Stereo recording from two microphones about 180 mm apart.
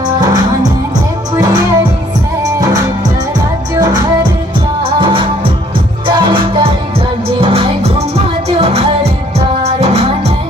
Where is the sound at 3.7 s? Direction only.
20° right (ahead or behind).